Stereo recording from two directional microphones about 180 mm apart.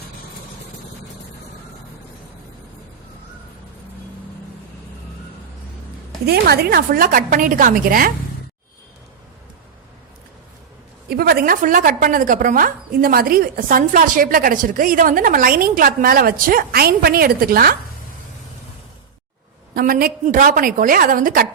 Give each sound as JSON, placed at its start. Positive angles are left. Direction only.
{"t": 6.2, "sound": "a woman's voice", "side_deg": -60}
{"t": 11.1, "sound": "a woman's voice", "side_deg": -60}
{"t": 19.7, "sound": "a woman's voice", "side_deg": -55}